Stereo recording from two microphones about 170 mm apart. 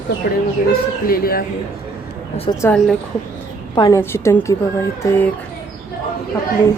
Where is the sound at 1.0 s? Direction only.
60° left (ahead or behind).